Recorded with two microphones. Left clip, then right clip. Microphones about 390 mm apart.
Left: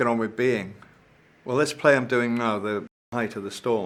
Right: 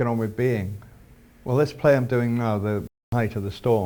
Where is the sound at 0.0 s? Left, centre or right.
Right.